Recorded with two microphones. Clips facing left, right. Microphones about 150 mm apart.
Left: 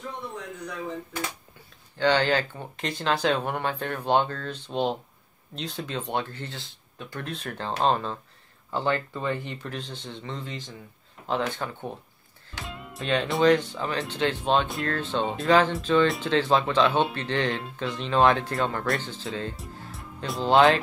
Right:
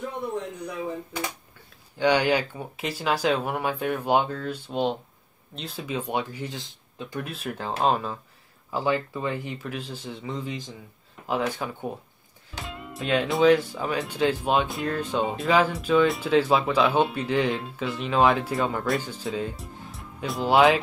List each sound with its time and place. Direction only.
0.8 s speech: 15° right (ahead or behind)
7.2 s speech: 5° right (ahead or behind)
19.5 s speech: centre (ahead or behind)